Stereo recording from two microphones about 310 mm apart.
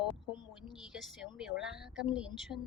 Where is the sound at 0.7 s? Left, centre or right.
Centre.